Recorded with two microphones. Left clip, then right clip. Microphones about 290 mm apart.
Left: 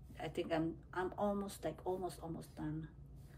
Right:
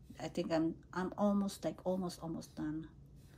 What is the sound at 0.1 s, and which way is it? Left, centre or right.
A woman's voice, centre.